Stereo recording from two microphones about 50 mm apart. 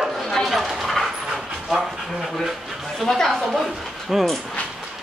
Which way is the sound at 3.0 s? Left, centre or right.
Centre.